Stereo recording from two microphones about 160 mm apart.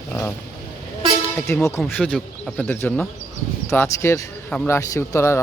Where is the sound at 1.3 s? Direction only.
15° left (ahead or behind).